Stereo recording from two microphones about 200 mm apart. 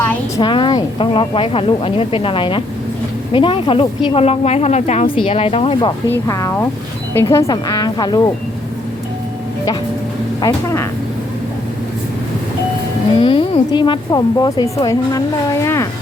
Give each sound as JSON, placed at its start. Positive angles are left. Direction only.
{"t": 0.4, "sound": "speech", "side_deg": 25}
{"t": 6.2, "sound": "speech", "side_deg": 15}
{"t": 10.4, "sound": "speech", "side_deg": 15}
{"t": 13.1, "sound": "speech", "side_deg": 25}